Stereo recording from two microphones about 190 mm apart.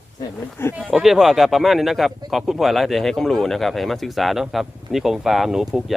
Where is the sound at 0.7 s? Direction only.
Centre (ahead or behind).